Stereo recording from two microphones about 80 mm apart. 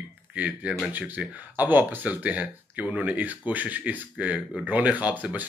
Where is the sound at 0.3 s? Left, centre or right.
Centre.